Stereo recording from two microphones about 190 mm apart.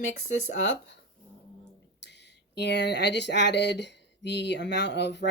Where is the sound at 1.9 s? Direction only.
65° left (ahead or behind).